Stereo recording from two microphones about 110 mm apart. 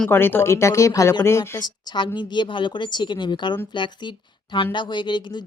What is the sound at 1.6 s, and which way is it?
Speech, 45° left (ahead or behind).